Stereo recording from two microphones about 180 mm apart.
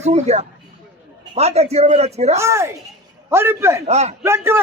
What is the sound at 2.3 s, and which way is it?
A man's voice, 15° right (ahead or behind).